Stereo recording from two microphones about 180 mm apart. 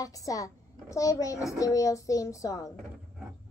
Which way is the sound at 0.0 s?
20° left (ahead or behind).